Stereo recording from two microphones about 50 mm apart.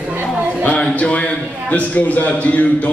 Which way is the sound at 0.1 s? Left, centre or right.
Right.